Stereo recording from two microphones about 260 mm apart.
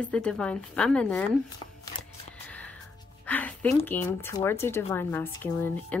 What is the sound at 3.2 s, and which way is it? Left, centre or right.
Speech, centre.